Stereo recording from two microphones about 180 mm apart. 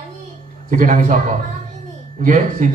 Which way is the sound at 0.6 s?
45° right (ahead or behind).